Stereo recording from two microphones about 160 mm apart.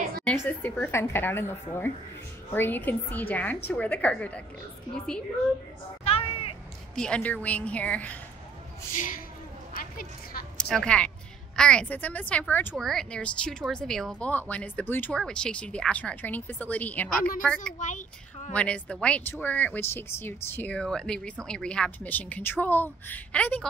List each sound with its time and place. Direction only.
0.2 s speech: 5° left (ahead or behind)
6.0 s a sound: 35° left (ahead or behind)
7.0 s speech: 5° left (ahead or behind)
9.8 s a sound: 65° left (ahead or behind)
10.6 s a woman's voice: 5° left (ahead or behind)
17.7 s speech: 50° left (ahead or behind)
18.5 s speech: 10° left (ahead or behind)